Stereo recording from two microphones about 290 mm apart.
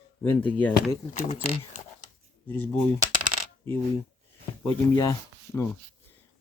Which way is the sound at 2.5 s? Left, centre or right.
Centre.